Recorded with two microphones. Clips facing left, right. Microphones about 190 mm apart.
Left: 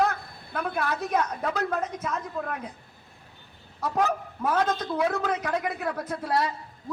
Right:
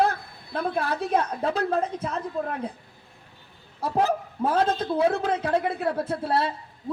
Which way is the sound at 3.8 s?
30° right (ahead or behind).